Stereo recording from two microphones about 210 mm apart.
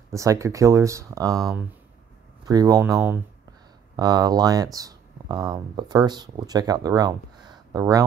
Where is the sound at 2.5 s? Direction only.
15° right (ahead or behind).